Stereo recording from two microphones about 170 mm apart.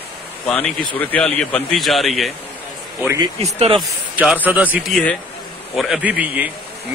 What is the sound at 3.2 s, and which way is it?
Speech, 35° right (ahead or behind).